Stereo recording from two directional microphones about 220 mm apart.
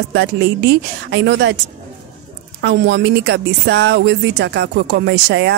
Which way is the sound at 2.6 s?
50° right (ahead or behind).